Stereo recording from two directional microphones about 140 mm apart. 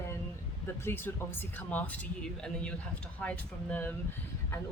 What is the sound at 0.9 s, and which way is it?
Speech, 15° left (ahead or behind).